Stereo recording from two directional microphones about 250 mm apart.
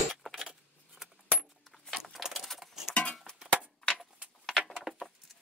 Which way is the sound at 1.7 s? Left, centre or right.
Centre.